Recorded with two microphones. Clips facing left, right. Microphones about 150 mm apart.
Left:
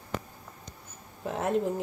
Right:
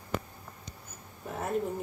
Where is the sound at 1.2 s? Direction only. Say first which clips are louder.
Left 5 dB; 90° left.